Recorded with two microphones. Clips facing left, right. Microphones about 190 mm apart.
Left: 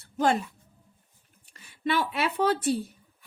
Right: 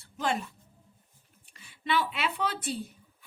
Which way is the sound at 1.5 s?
45° left (ahead or behind).